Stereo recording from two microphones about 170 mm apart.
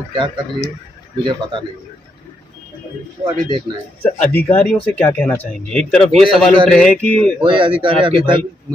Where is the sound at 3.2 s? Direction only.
25° right (ahead or behind).